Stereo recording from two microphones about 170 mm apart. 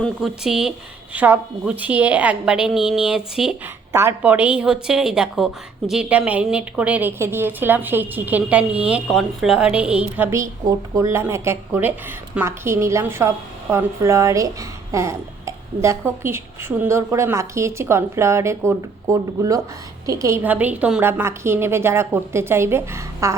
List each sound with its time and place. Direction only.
0.0 s a woman's voice: centre (ahead or behind); by 23.4 s 15° right (ahead or behind)